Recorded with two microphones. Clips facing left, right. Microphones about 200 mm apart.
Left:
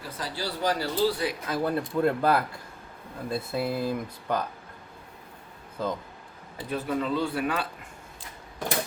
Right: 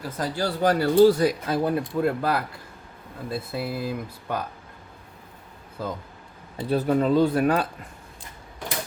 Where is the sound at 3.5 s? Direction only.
5° right (ahead or behind).